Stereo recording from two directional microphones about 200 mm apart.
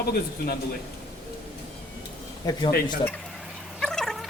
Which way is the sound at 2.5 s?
20° left (ahead or behind).